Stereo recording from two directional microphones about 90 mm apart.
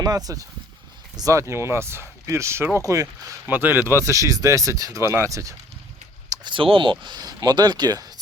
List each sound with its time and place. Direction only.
0.0 s speech: 45° right (ahead or behind)
3.4 s speech: 20° right (ahead or behind)
4.0 s speech: 35° right (ahead or behind)
6.3 s speech: 60° right (ahead or behind)
7.0 s speech: 50° right (ahead or behind)